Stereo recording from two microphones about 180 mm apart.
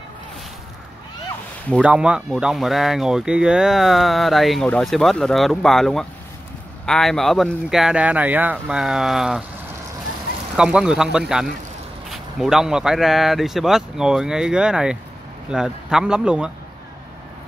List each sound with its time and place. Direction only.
1.8 s speech: 5° right (ahead or behind)
10.5 s speech: 5° right (ahead or behind)